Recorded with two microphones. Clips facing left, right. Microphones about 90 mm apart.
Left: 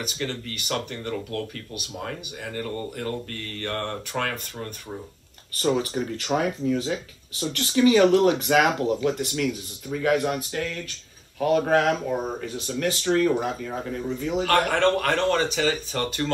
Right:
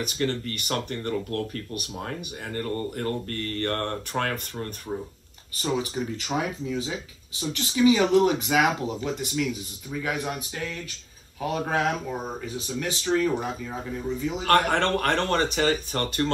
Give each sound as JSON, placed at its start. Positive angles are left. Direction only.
{"t": 0.0, "sound": "speech", "side_deg": -45}
{"t": 5.6, "sound": "speech", "side_deg": -5}
{"t": 14.4, "sound": "speech", "side_deg": -40}